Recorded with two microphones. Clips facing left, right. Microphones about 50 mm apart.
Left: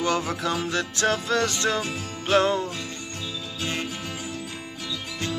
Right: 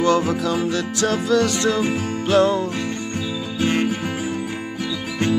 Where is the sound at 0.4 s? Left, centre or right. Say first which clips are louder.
Right 5 dB; left.